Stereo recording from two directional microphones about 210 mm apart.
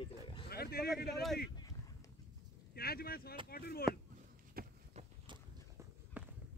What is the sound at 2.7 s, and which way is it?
Speech, 45° left (ahead or behind).